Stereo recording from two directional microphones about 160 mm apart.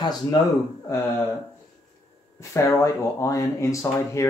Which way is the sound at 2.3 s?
20° left (ahead or behind).